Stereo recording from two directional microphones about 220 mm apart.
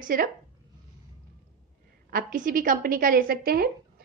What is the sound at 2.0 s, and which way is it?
A woman's voice, 40° right (ahead or behind).